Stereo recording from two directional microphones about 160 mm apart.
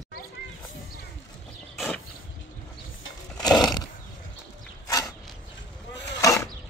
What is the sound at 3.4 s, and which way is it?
Horse, 25° left (ahead or behind).